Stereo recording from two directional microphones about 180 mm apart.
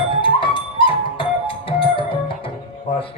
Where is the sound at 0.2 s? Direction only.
30° left (ahead or behind).